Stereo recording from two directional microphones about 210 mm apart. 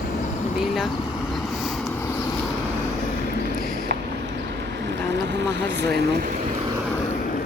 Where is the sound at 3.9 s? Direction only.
50° right (ahead or behind).